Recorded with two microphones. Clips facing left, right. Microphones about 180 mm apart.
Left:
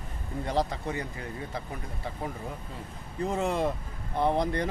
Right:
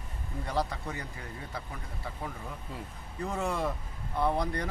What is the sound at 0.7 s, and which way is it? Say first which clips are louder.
Speech: left 5 dB; 20° left (ahead or behind).